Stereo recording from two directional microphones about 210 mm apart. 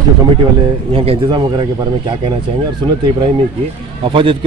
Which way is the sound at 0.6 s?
25° right (ahead or behind).